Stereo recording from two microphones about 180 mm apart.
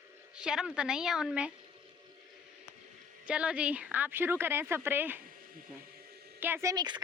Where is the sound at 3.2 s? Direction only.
5° right (ahead or behind).